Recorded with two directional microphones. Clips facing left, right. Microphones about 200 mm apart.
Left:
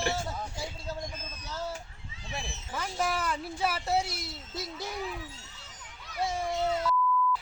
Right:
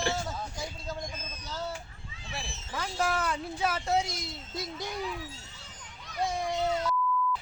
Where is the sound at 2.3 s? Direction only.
20° left (ahead or behind).